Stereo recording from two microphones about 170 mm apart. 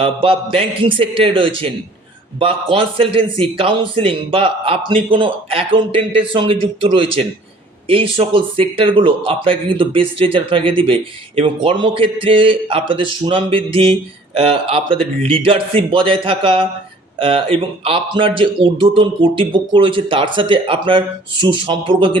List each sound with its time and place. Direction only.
0.0 s speech: 30° right (ahead or behind)